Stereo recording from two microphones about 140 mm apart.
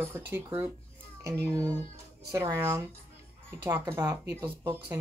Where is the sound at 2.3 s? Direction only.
20° right (ahead or behind).